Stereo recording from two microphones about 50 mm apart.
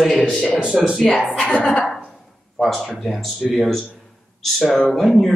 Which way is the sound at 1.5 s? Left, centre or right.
Left.